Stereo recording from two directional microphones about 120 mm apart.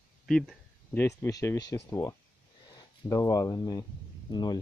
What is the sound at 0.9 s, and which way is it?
Speech, 20° left (ahead or behind).